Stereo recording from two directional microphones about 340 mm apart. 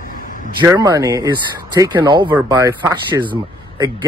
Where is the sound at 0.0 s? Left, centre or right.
Left.